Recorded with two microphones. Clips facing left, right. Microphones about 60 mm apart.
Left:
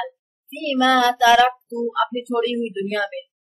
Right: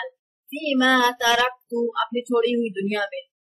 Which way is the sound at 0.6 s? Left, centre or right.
Centre.